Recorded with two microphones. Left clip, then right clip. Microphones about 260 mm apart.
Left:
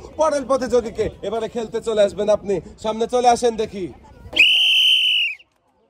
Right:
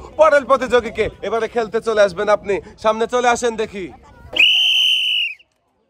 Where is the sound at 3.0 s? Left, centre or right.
Centre.